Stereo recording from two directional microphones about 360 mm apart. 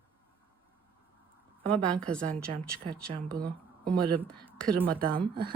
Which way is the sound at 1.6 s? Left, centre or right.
Centre.